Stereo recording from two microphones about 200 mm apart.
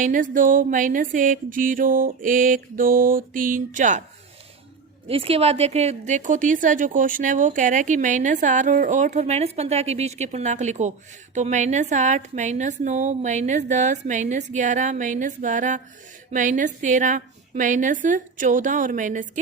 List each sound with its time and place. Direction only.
0.0 s music: 40° right (ahead or behind)
5.0 s a woman's voice: 30° right (ahead or behind)